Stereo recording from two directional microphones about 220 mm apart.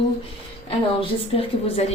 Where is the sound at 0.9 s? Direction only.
25° left (ahead or behind).